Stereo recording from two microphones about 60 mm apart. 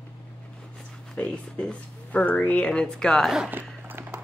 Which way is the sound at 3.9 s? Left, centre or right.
Right.